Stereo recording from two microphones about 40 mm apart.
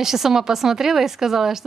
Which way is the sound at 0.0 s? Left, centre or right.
Centre.